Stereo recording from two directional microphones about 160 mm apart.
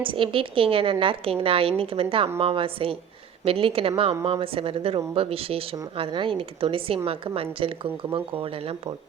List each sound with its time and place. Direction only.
0.0 s speech: 35° right (ahead or behind)